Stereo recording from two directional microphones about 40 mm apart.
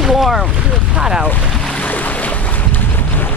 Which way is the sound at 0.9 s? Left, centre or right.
Centre.